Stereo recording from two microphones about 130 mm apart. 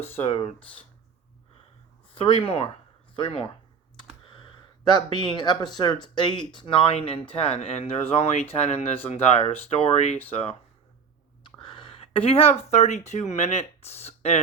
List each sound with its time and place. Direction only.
0.0 s speech: 50° left (ahead or behind)
2.1 s speech: 45° left (ahead or behind)
4.3 s a sound: 40° left (ahead or behind)
4.9 s speech: 35° left (ahead or behind)
11.6 s speech: 40° left (ahead or behind)